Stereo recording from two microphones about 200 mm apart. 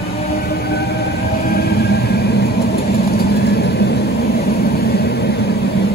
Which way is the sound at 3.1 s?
50° left (ahead or behind).